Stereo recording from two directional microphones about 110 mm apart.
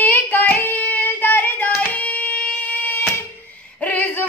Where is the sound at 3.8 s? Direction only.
15° left (ahead or behind).